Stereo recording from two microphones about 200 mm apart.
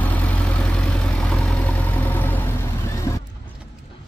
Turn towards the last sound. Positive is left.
turn(degrees=15)  # may be behind; listen again after turning